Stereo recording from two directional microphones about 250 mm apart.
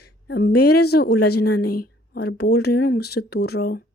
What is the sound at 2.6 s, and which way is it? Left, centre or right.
Speech, left.